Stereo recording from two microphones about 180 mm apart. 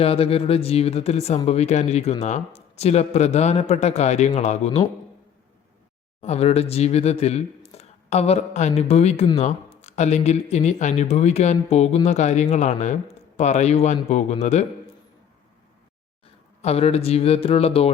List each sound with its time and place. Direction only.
0.0 s speech: 35° left (ahead or behind)
6.2 s speech: 35° left (ahead or behind)
16.6 s speech: 35° left (ahead or behind)